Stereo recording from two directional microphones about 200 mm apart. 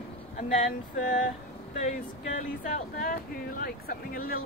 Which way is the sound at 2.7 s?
45° left (ahead or behind).